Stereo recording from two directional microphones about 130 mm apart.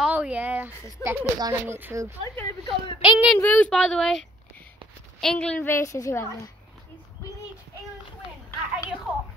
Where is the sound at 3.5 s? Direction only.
5° left (ahead or behind); by 6.5 s 25° left (ahead or behind).